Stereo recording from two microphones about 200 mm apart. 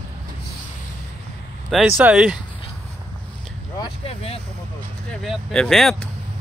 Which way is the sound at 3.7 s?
30° left (ahead or behind).